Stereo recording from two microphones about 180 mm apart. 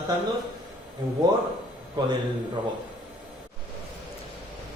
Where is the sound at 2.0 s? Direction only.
25° right (ahead or behind).